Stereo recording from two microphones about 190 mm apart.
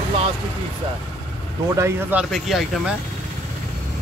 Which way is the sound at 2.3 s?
Centre (ahead or behind).